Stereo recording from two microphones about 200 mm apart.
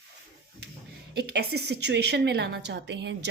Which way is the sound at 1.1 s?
55° right (ahead or behind).